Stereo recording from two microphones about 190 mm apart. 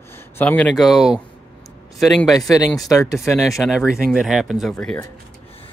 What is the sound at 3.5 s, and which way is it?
Speech, 5° right (ahead or behind).